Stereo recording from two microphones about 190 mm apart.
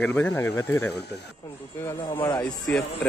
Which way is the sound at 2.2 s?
10° left (ahead or behind).